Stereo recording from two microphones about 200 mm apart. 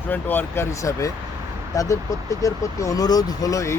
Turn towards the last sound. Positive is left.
turn(degrees=15)  # may be behind; listen again after turning